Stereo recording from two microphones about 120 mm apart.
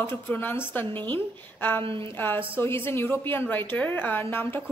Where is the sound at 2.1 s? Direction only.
15° left (ahead or behind).